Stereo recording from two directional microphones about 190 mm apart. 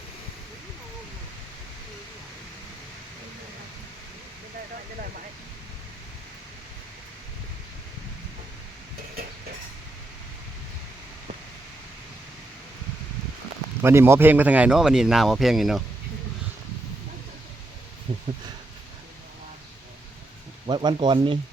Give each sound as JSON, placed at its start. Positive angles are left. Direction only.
{"t": 13.8, "sound": "speech", "side_deg": -15}
{"t": 18.1, "sound": "a sound", "side_deg": -30}
{"t": 20.7, "sound": "speech", "side_deg": -25}